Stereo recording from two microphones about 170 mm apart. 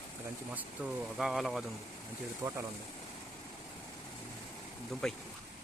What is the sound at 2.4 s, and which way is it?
Speech, 20° right (ahead or behind).